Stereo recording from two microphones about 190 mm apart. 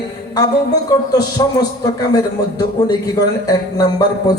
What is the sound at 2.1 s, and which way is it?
A man's voice, 20° left (ahead or behind).